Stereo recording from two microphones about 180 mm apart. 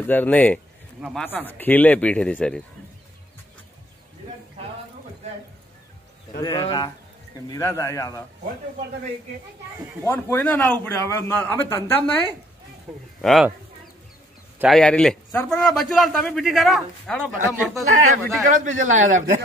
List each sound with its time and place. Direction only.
0.0 s a man's voice: 10° left (ahead or behind)
6.4 s a man's voice: 25° left (ahead or behind)
10.0 s a man's voice: 15° left (ahead or behind)
13.2 s a man's voice: centre (ahead or behind)
14.6 s a man's voice: centre (ahead or behind)
17.8 s speech: 45° right (ahead or behind)